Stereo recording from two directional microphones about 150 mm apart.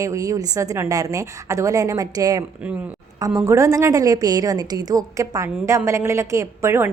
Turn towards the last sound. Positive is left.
turn(degrees=-15)  # may be behind; listen again after turning